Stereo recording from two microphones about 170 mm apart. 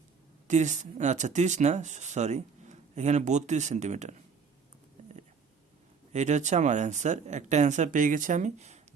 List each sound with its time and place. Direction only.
0.4 s speech: 45° right (ahead or behind)
6.1 s speech: 45° right (ahead or behind)